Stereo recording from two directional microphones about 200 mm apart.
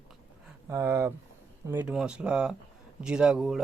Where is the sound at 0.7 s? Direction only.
15° right (ahead or behind).